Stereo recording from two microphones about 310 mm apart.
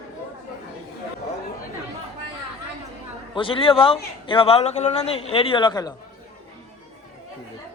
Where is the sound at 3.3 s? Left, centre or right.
Centre.